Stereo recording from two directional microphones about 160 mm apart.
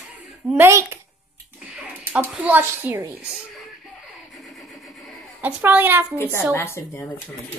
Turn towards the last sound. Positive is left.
turn(degrees=15)  # may be behind; listen again after turning